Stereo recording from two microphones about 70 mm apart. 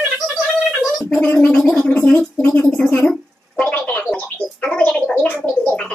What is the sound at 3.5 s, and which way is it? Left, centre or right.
Gargling, left.